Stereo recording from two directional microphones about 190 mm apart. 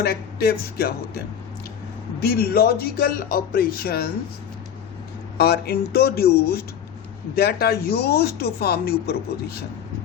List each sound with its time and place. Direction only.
0.0 s speech: 55° left (ahead or behind)
2.2 s speech: 55° left (ahead or behind)
5.4 s speech: 55° left (ahead or behind)